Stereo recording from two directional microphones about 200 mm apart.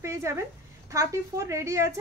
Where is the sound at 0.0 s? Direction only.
15° right (ahead or behind).